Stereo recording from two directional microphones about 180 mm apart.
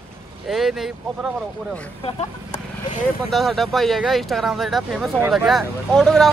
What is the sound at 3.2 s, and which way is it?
Speech, centre (ahead or behind).